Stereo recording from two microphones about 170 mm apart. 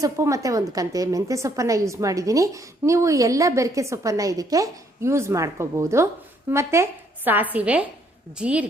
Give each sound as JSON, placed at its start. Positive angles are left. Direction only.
{"t": 0.0, "sound": "a woman's voice", "side_deg": -20}